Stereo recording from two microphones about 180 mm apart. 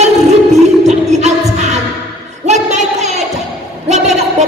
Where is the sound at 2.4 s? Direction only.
40° right (ahead or behind).